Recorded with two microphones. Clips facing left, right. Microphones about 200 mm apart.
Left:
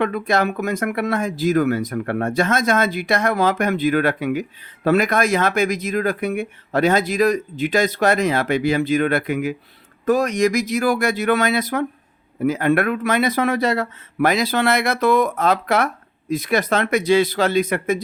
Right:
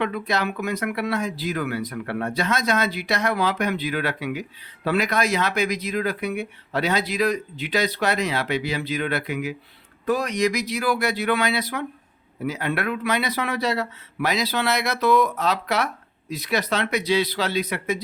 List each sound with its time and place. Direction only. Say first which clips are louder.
0.0 s speech: left 5 dB; 50° left (ahead or behind)